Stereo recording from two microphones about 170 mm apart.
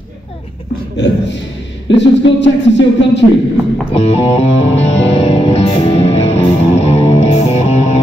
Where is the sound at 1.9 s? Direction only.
90° left.